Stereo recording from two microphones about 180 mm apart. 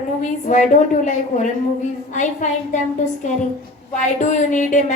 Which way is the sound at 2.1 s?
45° left (ahead or behind).